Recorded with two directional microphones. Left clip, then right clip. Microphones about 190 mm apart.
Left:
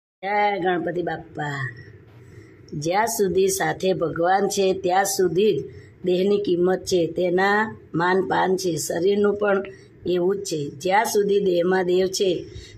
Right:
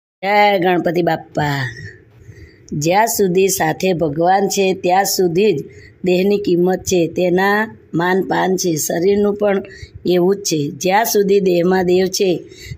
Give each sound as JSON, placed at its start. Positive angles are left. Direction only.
{"t": 0.2, "sound": "speech", "side_deg": -45}
{"t": 2.8, "sound": "speech", "side_deg": -40}